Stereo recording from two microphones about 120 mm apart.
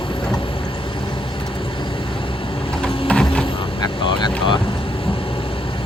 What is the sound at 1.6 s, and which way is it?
Vehicle, 45° left (ahead or behind).